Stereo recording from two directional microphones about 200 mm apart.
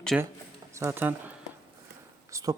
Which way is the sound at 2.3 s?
15° right (ahead or behind).